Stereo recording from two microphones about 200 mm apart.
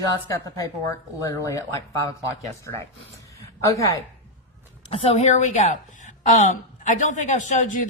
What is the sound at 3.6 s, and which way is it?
Speech, 15° left (ahead or behind).